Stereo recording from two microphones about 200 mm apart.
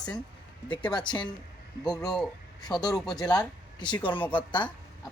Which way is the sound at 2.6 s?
20° left (ahead or behind).